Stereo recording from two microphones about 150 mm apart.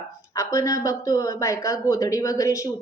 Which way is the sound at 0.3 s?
20° left (ahead or behind).